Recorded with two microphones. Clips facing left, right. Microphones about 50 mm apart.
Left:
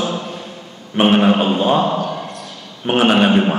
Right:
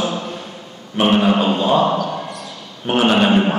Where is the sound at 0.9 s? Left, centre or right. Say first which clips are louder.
Left 2 dB; left.